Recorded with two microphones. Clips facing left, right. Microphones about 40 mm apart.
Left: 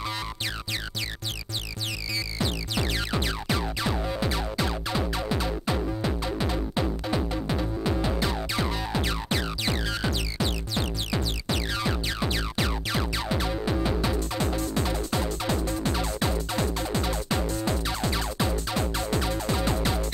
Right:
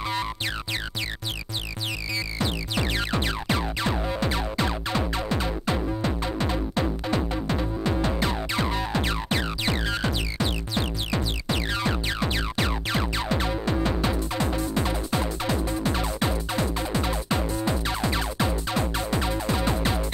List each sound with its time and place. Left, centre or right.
2.4 s music: centre
6.0 s music: centre
8.2 s music: centre